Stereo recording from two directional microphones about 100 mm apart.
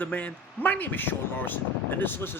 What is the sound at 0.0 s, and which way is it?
Speech, 15° left (ahead or behind).